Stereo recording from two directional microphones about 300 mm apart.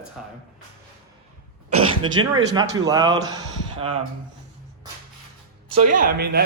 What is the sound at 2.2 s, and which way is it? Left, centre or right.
A man's voice, centre.